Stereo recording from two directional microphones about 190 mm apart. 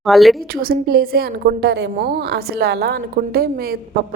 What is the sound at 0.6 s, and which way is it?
A woman's voice, 50° right (ahead or behind).